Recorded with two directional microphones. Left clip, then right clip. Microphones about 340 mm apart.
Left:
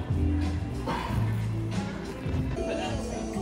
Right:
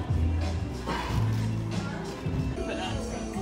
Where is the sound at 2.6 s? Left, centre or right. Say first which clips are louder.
Left 2 dB; centre.